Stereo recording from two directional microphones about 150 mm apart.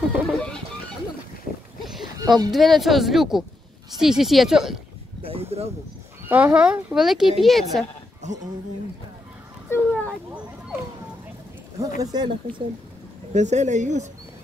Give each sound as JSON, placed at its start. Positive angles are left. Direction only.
{"t": 0.1, "sound": "music", "side_deg": 5}
{"t": 1.8, "sound": "a sound", "side_deg": 0}
{"t": 2.1, "sound": "speech", "side_deg": -25}
{"t": 2.5, "sound": "speech", "side_deg": 0}
{"t": 5.2, "sound": "a sound", "side_deg": -40}
{"t": 6.2, "sound": "speech", "side_deg": -10}
{"t": 9.7, "sound": "a sound", "side_deg": 10}
{"t": 12.0, "sound": "speech", "side_deg": -25}
{"t": 13.3, "sound": "speech", "side_deg": -50}